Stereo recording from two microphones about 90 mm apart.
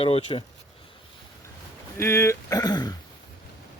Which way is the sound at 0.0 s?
75° left (ahead or behind).